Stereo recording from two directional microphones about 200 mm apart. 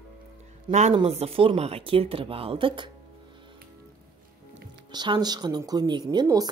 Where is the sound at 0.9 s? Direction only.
30° right (ahead or behind).